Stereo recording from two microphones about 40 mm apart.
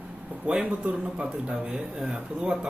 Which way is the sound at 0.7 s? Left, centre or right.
Right.